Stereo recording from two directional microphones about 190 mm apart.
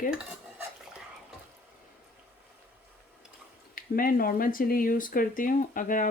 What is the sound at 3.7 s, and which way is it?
Speech, 50° left (ahead or behind).